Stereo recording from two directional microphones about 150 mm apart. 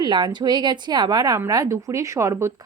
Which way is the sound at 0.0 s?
30° right (ahead or behind).